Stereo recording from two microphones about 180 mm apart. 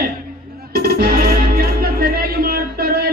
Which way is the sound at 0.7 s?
60° right (ahead or behind).